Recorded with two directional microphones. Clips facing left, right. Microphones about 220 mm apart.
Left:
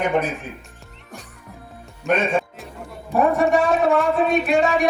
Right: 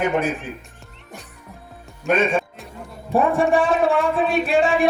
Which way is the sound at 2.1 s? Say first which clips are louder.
Right 1 dB; centre (ahead or behind).